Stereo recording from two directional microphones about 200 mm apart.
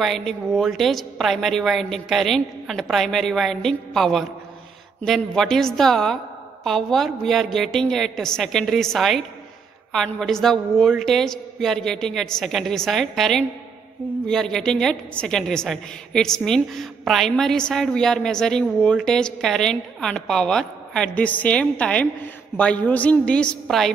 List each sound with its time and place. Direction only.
0.0 s a woman's voice: centre (ahead or behind)